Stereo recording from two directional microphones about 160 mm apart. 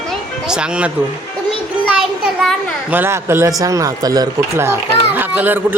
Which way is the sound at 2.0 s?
Centre (ahead or behind).